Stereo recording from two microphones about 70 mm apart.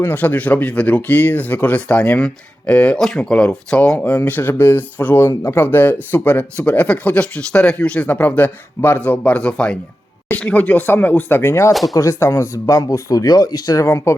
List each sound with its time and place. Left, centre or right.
0.0 s speech: left
4.3 s speech: left
13.8 s speech: left